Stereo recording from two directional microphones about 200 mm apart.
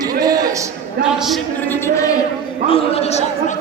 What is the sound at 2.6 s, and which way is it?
Speech, 30° left (ahead or behind).